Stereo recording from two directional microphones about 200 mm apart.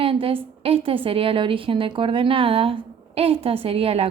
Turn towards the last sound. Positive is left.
turn(degrees=-30)  # may be behind; listen again after turning